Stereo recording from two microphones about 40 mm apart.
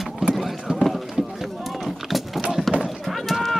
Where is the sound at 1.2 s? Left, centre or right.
Centre.